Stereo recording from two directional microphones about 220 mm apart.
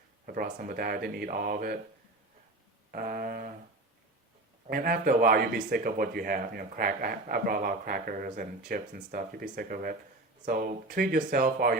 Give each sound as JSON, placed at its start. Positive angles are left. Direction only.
{"t": 0.3, "sound": "speech", "side_deg": -40}
{"t": 2.9, "sound": "a sound", "side_deg": -40}
{"t": 4.7, "sound": "speech", "side_deg": -40}